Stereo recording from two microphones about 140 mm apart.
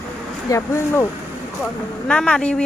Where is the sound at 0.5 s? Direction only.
20° left (ahead or behind).